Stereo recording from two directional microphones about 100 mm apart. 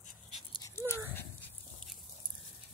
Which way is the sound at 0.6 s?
25° left (ahead or behind).